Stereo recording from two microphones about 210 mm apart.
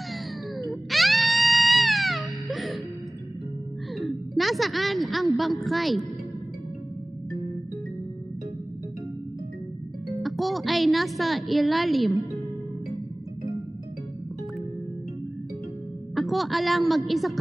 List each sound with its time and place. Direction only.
0.6 s music: centre (ahead or behind)
3.9 s a woman's voice: centre (ahead or behind)
10.2 s a woman's voice: centre (ahead or behind)
12.9 s music: 15° right (ahead or behind)
16.2 s a woman's voice: centre (ahead or behind)